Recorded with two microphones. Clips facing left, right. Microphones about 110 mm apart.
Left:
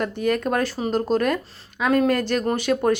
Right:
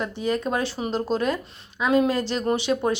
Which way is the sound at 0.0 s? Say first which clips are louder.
Left 3 dB; 60° left (ahead or behind).